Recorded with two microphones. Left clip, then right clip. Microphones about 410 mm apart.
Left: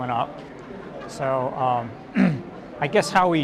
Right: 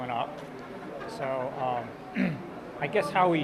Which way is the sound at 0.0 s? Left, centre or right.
Centre.